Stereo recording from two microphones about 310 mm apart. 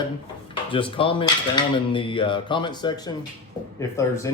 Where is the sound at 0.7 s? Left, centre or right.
Centre.